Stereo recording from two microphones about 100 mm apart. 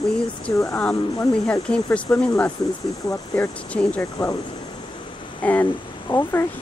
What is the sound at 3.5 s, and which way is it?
Speech, 15° left (ahead or behind).